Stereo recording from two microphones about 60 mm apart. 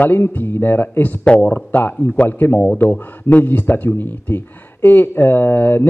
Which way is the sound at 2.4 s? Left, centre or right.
Left.